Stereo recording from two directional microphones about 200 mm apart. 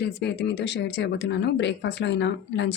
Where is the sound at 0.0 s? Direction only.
55° left (ahead or behind).